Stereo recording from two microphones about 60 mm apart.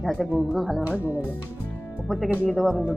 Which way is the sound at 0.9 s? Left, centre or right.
Right.